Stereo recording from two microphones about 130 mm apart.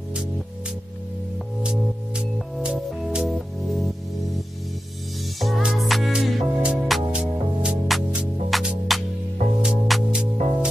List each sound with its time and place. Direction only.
2.1 s music: 5° right (ahead or behind)
5.4 s music: centre (ahead or behind)